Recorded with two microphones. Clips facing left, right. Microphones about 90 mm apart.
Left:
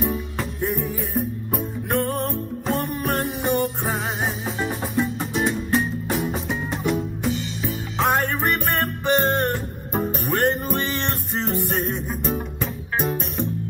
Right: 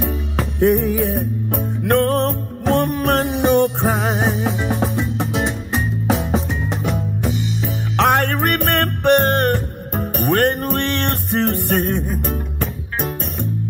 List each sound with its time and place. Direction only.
0.6 s music: 75° right (ahead or behind)
6.0 s music: 90° right
8.0 s music: 70° right (ahead or behind)